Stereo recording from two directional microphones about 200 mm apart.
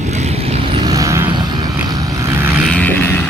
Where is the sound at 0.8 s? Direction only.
15° right (ahead or behind).